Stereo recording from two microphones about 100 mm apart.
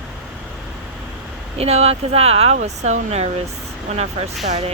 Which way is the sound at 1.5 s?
90° right.